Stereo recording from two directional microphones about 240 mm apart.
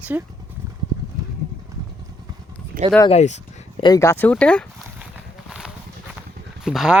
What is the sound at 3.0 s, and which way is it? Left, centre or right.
Speech, left.